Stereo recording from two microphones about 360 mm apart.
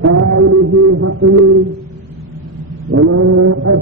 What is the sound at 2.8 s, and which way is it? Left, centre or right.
Mantra, right.